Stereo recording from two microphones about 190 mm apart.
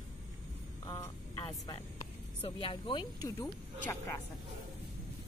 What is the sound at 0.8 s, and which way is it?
Speech, 15° left (ahead or behind).